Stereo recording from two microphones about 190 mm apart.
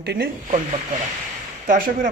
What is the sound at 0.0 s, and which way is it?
Speech, 60° right (ahead or behind).